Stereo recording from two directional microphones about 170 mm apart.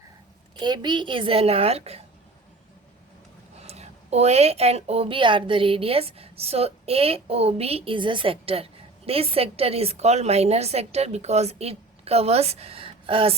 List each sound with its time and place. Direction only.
0.6 s a woman's voice: 25° right (ahead or behind)
3.6 s a woman's voice: 40° right (ahead or behind)